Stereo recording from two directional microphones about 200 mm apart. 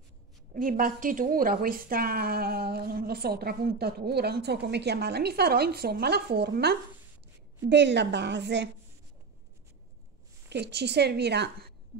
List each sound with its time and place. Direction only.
0.6 s a woman's voice: 45° right (ahead or behind); by 8.6 s 60° right (ahead or behind)
10.5 s a woman's voice: 55° right (ahead or behind)